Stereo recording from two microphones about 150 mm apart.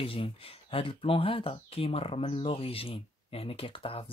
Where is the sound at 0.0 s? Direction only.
40° left (ahead or behind).